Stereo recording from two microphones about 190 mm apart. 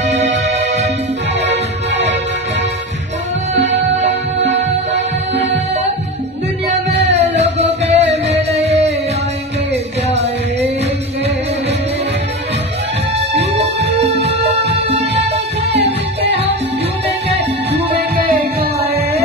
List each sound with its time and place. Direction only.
0.6 s music: 35° right (ahead or behind)
1.4 s music: 65° right (ahead or behind)
7.1 s music: 35° right (ahead or behind)
13.4 s music: 35° right (ahead or behind)
17.9 s music: 50° right (ahead or behind)
18.8 s music: 30° right (ahead or behind)